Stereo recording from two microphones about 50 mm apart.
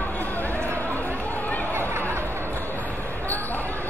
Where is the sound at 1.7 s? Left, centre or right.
Right.